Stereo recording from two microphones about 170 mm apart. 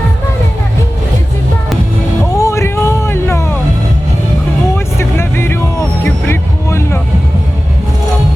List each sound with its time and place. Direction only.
2.3 s music: 20° left (ahead or behind)
4.9 s vehicle: 15° left (ahead or behind)
6.2 s music: 15° left (ahead or behind)